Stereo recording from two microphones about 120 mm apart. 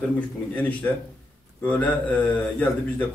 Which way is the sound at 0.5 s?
10° left (ahead or behind).